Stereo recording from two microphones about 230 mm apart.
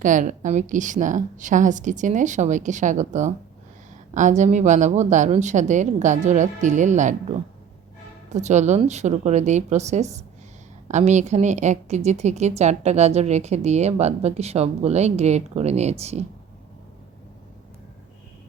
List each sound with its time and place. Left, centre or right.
0.0 s a woman's voice: right
8.3 s a woman's voice: right